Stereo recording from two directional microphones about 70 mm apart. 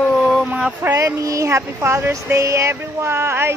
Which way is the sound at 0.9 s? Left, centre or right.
Right.